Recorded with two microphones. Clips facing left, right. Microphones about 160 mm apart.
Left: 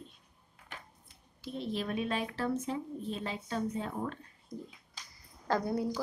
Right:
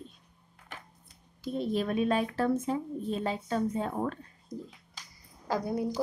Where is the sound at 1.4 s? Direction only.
45° right (ahead or behind).